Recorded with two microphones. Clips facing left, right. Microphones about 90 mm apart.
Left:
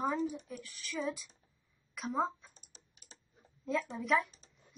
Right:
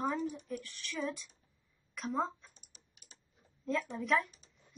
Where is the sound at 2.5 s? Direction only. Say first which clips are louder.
Left 3 dB; 35° left (ahead or behind).